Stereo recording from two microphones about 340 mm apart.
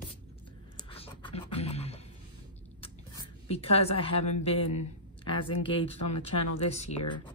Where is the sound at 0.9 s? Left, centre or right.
Centre.